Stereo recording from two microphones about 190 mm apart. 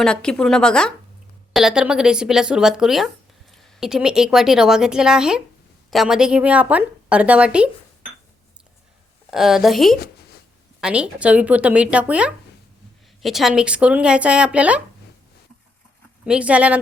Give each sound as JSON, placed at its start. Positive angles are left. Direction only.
{"t": 0.0, "sound": "a woman's voice", "side_deg": 5}
{"t": 9.3, "sound": "a woman's voice", "side_deg": 0}
{"t": 16.2, "sound": "a woman's voice", "side_deg": -5}